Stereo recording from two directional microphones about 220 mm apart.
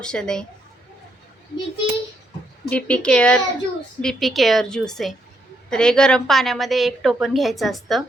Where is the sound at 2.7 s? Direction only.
5° left (ahead or behind).